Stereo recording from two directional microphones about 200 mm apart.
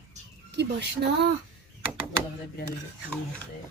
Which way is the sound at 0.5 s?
55° right (ahead or behind).